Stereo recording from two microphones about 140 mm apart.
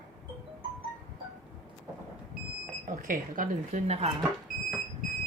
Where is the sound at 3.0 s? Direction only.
70° right (ahead or behind).